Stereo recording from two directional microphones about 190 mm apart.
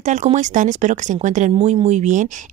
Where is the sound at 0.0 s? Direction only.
40° right (ahead or behind).